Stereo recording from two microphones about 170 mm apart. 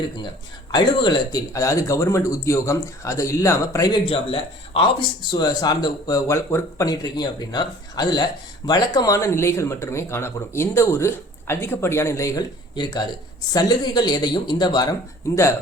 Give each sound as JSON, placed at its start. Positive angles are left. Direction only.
{"t": 0.7, "sound": "speech", "side_deg": 25}